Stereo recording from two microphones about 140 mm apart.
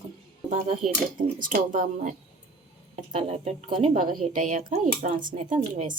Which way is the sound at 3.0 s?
55° right (ahead or behind).